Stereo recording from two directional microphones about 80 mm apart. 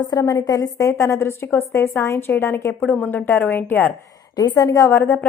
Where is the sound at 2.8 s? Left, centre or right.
Centre.